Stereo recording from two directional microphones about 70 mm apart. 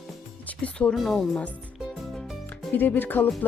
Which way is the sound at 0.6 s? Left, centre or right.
Centre.